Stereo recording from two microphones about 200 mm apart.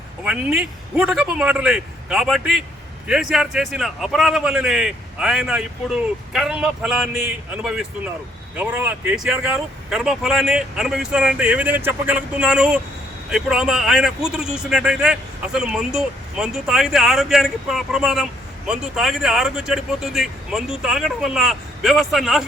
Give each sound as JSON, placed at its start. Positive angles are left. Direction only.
{"t": 0.3, "sound": "a man's voice", "side_deg": -5}